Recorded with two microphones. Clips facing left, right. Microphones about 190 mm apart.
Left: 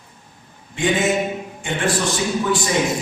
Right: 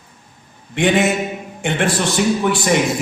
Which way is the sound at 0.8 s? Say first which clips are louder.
Right 5 dB; 65° right (ahead or behind).